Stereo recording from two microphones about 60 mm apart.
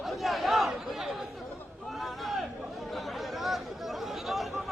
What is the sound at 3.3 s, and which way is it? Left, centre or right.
Chatter, centre.